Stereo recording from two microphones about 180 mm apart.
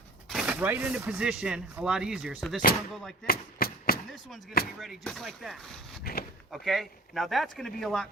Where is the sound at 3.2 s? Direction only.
55° left (ahead or behind).